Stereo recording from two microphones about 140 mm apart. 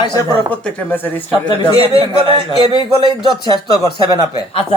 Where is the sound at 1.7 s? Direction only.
45° right (ahead or behind).